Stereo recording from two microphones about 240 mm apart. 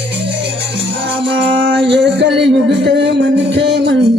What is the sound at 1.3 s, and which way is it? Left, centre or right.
Music, right.